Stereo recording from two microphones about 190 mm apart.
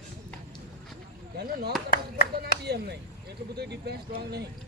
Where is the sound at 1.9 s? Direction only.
55° left (ahead or behind).